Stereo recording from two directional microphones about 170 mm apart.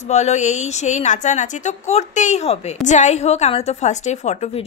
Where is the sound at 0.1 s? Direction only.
40° left (ahead or behind).